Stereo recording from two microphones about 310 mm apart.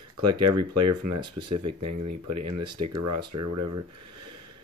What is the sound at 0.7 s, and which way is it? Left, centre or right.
Speech, right.